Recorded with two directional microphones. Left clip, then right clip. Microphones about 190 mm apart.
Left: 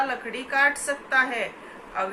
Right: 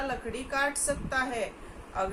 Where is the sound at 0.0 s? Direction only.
20° right (ahead or behind).